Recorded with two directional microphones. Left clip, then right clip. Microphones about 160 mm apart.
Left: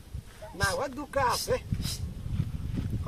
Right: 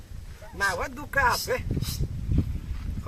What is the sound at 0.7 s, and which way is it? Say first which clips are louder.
Speech: right 3 dB; 5° right (ahead or behind).